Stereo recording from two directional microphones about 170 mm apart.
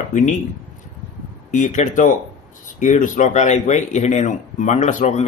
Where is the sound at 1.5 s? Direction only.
45° left (ahead or behind).